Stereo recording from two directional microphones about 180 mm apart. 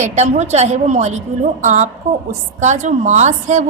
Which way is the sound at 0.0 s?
40° right (ahead or behind).